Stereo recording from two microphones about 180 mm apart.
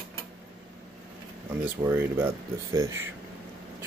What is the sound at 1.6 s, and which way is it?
Speech, 10° right (ahead or behind).